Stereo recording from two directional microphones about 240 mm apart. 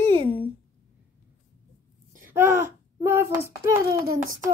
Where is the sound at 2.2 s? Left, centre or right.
Centre.